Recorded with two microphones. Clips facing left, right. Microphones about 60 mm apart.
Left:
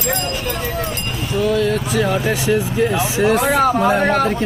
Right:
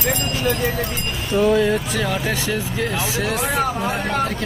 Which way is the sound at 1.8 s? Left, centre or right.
Centre.